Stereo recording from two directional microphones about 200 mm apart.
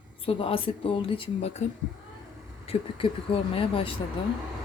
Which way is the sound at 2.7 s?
25° left (ahead or behind).